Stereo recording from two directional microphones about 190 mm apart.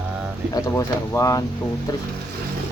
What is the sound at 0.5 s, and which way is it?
Speech, 15° left (ahead or behind).